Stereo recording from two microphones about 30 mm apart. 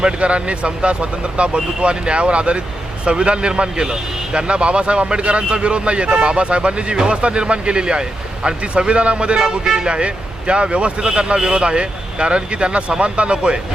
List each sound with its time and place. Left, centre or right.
0.0 s a man's voice: right
9.6 s speech: right
9.9 s a man's voice: right
11.6 s a man's voice: right